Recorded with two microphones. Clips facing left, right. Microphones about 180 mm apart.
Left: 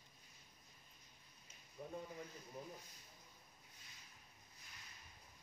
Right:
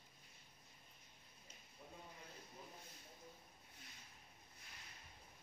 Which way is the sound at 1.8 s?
55° left (ahead or behind).